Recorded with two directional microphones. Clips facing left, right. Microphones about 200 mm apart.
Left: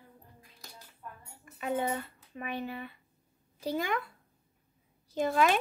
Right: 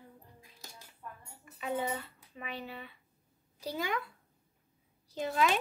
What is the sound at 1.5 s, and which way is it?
Dishes, 50° left (ahead or behind).